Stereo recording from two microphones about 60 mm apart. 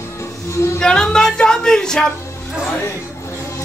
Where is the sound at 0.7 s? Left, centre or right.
Centre.